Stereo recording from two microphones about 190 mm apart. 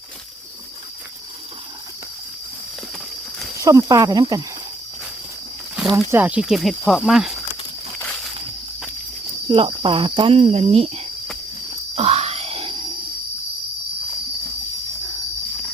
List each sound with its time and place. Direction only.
3.6 s speech: 20° right (ahead or behind)
5.9 s speech: 15° right (ahead or behind)
9.5 s speech: 25° right (ahead or behind)
11.9 s grunt: 30° right (ahead or behind)